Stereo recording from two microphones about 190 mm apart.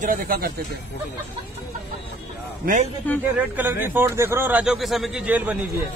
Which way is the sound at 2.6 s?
45° right (ahead or behind).